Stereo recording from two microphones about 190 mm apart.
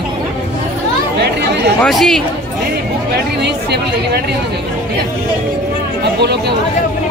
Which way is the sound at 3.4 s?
60° right (ahead or behind).